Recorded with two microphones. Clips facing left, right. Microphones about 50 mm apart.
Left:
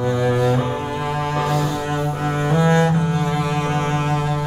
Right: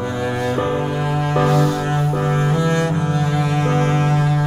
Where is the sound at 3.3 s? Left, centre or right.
Centre.